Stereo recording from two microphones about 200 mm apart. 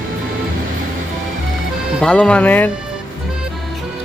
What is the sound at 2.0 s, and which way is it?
Speech, 5° left (ahead or behind).